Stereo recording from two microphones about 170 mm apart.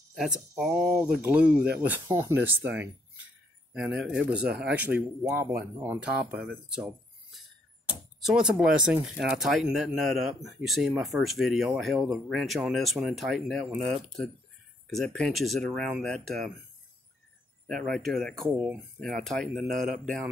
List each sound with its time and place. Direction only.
0.1 s speech: centre (ahead or behind)
3.7 s speech: 5° right (ahead or behind)
8.2 s speech: 5° right (ahead or behind)
17.8 s speech: centre (ahead or behind)
19.7 s speech: 55° right (ahead or behind)